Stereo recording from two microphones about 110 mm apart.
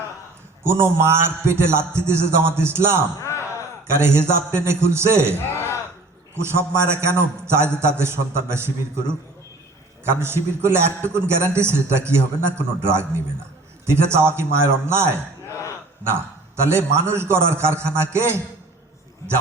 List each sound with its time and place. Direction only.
0.6 s a man's voice: 25° right (ahead or behind)
3.2 s a sound: 25° left (ahead or behind)
3.9 s a man's voice: 25° right (ahead or behind)
6.3 s a man's voice: 25° right (ahead or behind)
15.4 s a sound: 30° left (ahead or behind)
16.6 s a man's voice: 25° right (ahead or behind)